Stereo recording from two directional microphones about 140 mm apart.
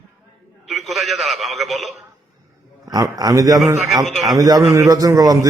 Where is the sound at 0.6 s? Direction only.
Centre (ahead or behind).